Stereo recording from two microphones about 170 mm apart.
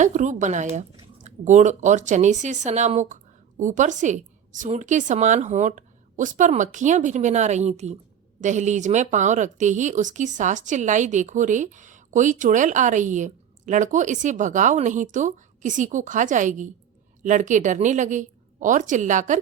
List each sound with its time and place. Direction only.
0.0 s speech: 45° right (ahead or behind)